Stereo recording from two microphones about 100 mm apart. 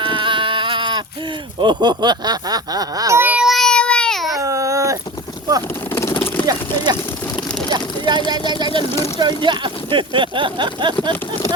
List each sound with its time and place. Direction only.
0.0 s a sound: 55° right (ahead or behind)
1.5 s speech: 50° right (ahead or behind)
3.2 s child singing: 15° right (ahead or behind)
3.4 s baby cry: centre (ahead or behind)
4.4 s dog: 30° right (ahead or behind)
5.9 s vehicle: 25° left (ahead or behind)
6.4 s a sound: 40° right (ahead or behind)
8.3 s speech: 45° right (ahead or behind)